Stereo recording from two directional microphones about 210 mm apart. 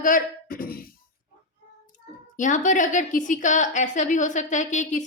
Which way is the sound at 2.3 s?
35° left (ahead or behind).